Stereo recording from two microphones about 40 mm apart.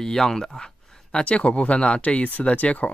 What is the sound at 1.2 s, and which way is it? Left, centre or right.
Speech, left.